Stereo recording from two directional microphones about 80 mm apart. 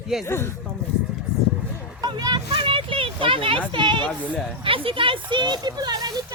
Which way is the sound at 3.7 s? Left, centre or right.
Right.